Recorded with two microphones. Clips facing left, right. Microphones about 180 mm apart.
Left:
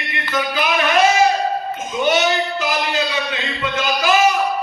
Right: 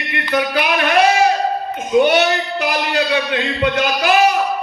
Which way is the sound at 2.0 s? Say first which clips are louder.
Right 3 dB; 60° right (ahead or behind).